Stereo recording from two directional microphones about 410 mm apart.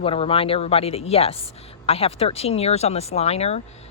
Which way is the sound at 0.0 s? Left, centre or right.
Centre.